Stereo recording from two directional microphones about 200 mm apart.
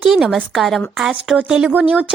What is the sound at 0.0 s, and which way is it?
A woman's voice, centre (ahead or behind).